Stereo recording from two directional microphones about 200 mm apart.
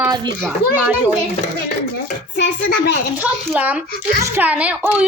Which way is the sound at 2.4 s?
60° left (ahead or behind).